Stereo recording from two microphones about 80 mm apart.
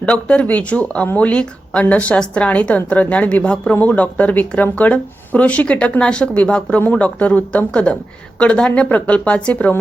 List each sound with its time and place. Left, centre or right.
0.0 s speech: centre